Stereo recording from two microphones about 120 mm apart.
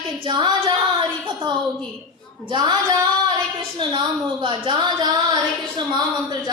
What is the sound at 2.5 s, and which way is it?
A woman's voice, 35° right (ahead or behind).